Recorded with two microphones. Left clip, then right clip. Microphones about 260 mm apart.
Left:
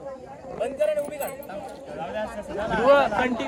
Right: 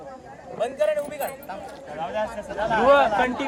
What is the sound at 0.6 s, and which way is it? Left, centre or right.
Speech, centre.